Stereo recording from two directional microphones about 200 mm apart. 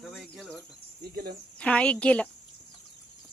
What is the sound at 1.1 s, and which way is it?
Speech, 50° right (ahead or behind).